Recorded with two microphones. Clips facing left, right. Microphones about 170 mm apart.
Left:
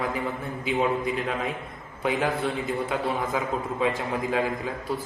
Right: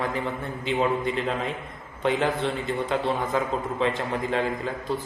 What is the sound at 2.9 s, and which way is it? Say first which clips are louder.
A man's voice: right 2 dB; centre (ahead or behind).